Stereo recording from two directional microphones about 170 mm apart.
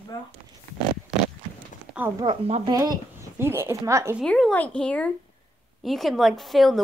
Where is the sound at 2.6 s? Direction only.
25° right (ahead or behind).